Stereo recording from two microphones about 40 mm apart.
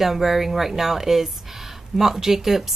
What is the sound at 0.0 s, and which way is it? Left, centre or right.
A woman's voice, centre.